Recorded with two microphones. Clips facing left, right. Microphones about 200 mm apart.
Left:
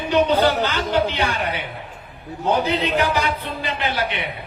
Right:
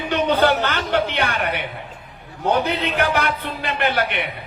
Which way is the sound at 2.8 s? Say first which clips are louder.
Even; 60° right (ahead or behind).